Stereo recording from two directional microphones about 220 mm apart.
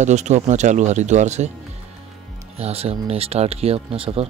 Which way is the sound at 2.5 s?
30° right (ahead or behind).